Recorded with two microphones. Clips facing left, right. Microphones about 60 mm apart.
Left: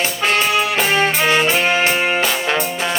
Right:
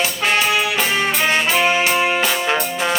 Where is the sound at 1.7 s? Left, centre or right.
Left.